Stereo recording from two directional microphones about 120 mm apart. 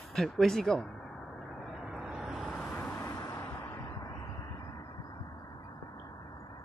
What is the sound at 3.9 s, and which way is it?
Vehicle, 30° left (ahead or behind).